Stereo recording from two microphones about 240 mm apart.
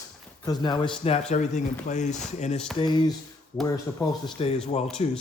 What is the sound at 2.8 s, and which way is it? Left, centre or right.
Speech, centre.